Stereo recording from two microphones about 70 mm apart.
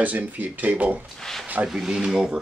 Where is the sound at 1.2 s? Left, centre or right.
Centre.